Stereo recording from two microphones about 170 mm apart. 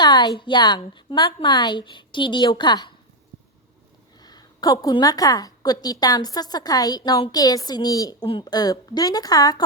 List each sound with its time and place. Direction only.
0.0 s a woman's voice: 25° left (ahead or behind)
4.2 s a woman's voice: 25° left (ahead or behind)